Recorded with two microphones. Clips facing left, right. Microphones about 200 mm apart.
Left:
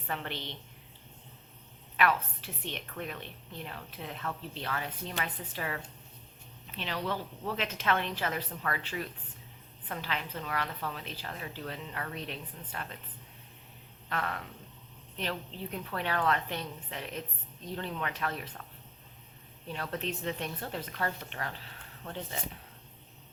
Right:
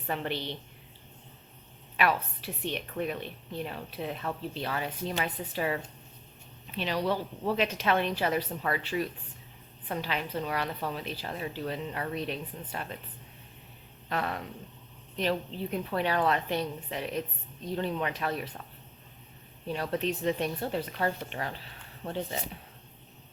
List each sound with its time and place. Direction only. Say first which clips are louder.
0.1 s a woman's voice: right 5 dB; 15° right (ahead or behind)
2.0 s a woman's voice: right 1 dB; 15° right (ahead or behind)
14.1 s a woman's voice: right 3 dB; 15° right (ahead or behind)
19.6 s a woman's voice: right 6 dB; 15° right (ahead or behind)